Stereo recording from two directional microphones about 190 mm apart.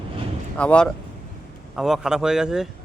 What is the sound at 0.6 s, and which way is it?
Speech, 5° left (ahead or behind).